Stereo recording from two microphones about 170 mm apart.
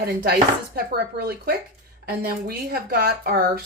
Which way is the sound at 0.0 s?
65° right (ahead or behind).